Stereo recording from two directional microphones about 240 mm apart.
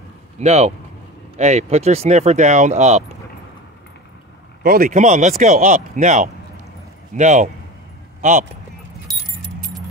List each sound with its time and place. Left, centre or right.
0.4 s speech: right
4.6 s speech: right